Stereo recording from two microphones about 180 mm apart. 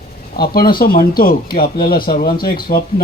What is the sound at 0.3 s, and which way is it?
Speech, 55° left (ahead or behind).